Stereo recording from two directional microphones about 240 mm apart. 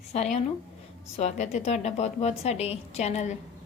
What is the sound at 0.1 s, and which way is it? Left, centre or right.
A woman's voice, left.